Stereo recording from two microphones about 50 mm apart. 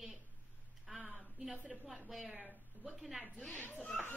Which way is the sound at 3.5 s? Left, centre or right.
Left.